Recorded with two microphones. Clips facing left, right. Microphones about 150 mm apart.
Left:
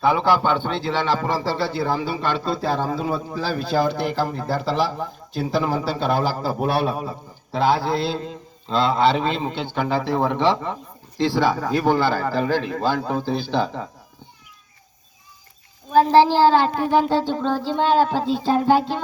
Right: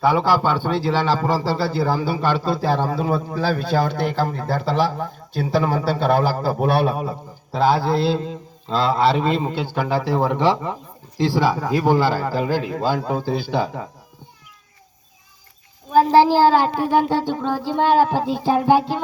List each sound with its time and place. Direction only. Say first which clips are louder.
0.0 s speech: right 1 dB; 5° right (ahead or behind)
11.2 s child singing: right 1 dB; 10° right (ahead or behind)
15.9 s child singing: right 1 dB; 5° right (ahead or behind)